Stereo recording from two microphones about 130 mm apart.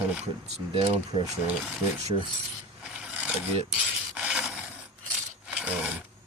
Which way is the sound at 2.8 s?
10° right (ahead or behind).